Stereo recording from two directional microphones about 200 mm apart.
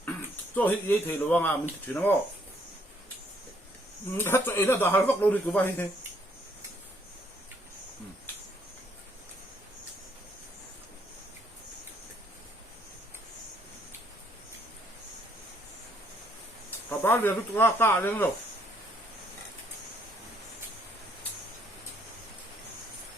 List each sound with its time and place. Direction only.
0.5 s speech: 10° left (ahead or behind)
4.2 s speech: 10° left (ahead or behind)
17.0 s speech: 10° left (ahead or behind)